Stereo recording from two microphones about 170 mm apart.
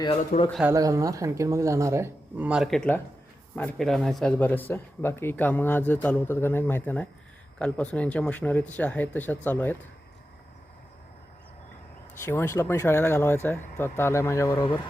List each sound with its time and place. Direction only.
0.6 s speech: 20° right (ahead or behind); by 9.7 s 10° left (ahead or behind)
12.2 s speech: 15° left (ahead or behind)